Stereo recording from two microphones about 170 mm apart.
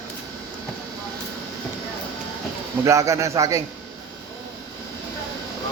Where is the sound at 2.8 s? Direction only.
20° right (ahead or behind).